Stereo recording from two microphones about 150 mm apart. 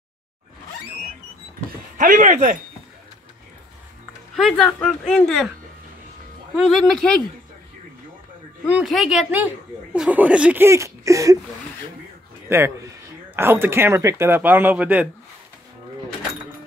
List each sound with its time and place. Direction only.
2.0 s speech: 55° right (ahead or behind)
4.4 s a woman's voice: centre (ahead or behind)
6.5 s a woman's voice: centre (ahead or behind)
8.6 s a woman's voice: 5° right (ahead or behind); by 11.3 s 20° right (ahead or behind)
12.4 s speech: 15° right (ahead or behind)